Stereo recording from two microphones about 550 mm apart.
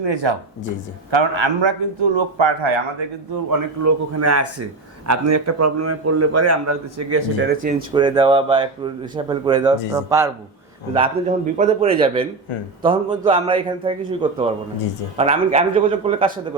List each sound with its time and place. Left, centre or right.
0.0 s speech: right
3.5 s a man's voice: right
7.9 s speech: centre